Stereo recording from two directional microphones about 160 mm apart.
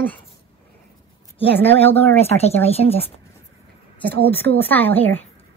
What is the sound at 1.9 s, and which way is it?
Speech, 40° left (ahead or behind).